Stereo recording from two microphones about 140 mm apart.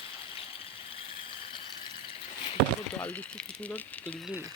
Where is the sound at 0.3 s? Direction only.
40° left (ahead or behind).